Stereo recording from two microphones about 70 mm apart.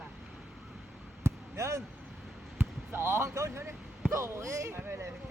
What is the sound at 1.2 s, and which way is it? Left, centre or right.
Basketball bounce, right.